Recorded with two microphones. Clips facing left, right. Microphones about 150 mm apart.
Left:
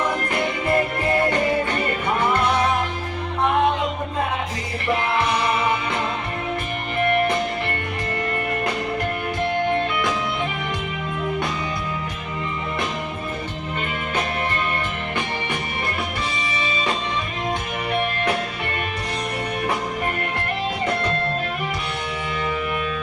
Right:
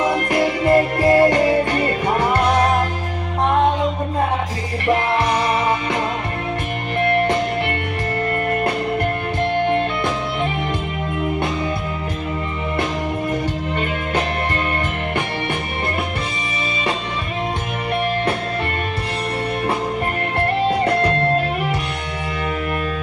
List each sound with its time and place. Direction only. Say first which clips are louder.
0.3 s music: right 6 dB; 35° right (ahead or behind)
20.7 s music: right 6 dB; 65° right (ahead or behind)